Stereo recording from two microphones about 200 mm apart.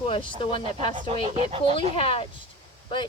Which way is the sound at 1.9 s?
30° left (ahead or behind).